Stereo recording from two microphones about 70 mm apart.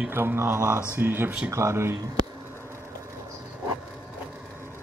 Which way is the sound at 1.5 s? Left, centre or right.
Right.